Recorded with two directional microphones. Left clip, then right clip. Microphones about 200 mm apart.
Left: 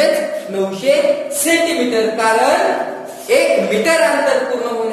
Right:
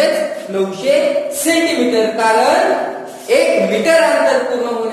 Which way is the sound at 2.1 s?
15° left (ahead or behind).